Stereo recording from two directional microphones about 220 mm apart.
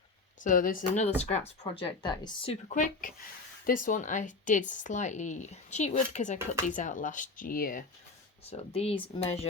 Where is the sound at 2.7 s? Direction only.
35° left (ahead or behind).